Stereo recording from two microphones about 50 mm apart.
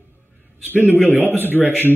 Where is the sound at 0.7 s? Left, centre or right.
Left.